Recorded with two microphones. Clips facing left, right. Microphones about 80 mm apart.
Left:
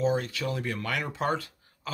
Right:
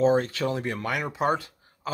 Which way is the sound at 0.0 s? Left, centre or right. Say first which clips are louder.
Right 5 dB; right.